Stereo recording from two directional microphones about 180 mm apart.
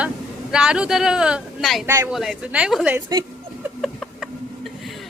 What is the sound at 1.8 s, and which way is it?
Speech, 15° right (ahead or behind).